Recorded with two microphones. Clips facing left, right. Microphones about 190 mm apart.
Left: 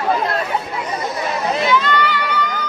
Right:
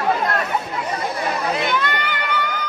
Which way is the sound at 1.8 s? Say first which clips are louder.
Left 5 dB; 55° right (ahead or behind).